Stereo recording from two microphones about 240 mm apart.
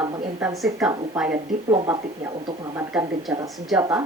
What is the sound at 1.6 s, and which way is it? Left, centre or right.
Speech, centre.